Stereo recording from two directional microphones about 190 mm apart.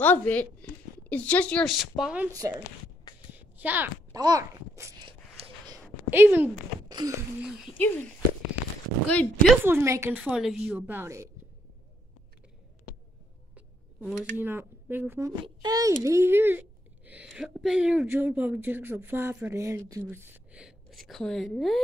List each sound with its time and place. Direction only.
0.0 s a woman's voice: 10° left (ahead or behind)
2.3 s speech: 20° right (ahead or behind)
3.3 s a sound: 10° right (ahead or behind)
4.2 s babbling: 20° right (ahead or behind)
6.0 s a woman's voice: 10° right (ahead or behind)
6.9 s a sound: 20° right (ahead or behind)
7.4 s speech: centre (ahead or behind)
7.7 s speech: 10° left (ahead or behind)
9.1 s speech: 5° left (ahead or behind)
9.7 s a woman's voice: 15° right (ahead or behind)
13.6 s a child's voice: 10° right (ahead or behind)